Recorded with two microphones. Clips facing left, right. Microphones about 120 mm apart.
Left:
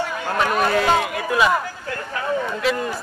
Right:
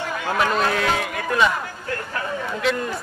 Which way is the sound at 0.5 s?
5° left (ahead or behind).